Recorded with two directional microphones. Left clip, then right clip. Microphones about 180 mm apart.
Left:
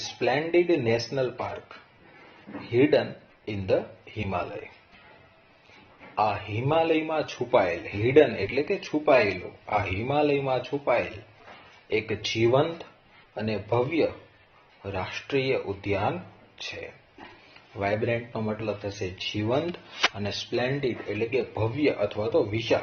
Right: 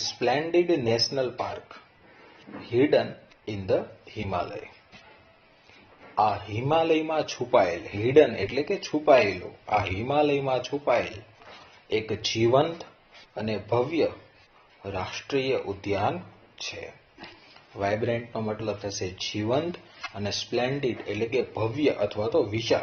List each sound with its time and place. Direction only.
0.0 s a man's voice: centre (ahead or behind)
6.1 s a man's voice: centre (ahead or behind)